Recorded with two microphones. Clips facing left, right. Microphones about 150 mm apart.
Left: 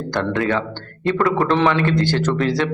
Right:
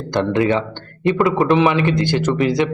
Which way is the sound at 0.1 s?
20° right (ahead or behind).